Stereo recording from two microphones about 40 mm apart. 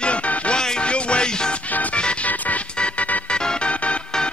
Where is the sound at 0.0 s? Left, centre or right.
Left.